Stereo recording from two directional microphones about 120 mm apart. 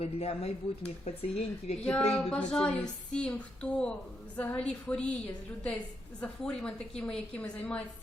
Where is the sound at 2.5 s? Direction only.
10° left (ahead or behind).